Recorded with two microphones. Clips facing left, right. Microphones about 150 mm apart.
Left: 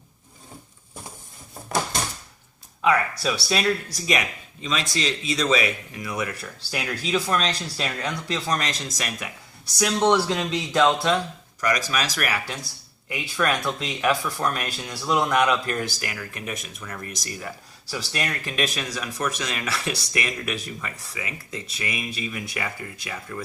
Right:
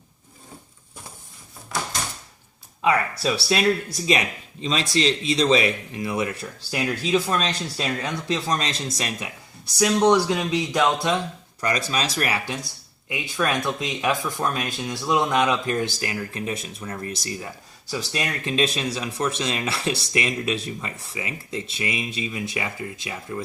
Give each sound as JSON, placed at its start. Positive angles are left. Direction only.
{"t": 3.8, "sound": "speech", "side_deg": -25}
{"t": 9.7, "sound": "speech", "side_deg": -5}
{"t": 11.6, "sound": "speech", "side_deg": -30}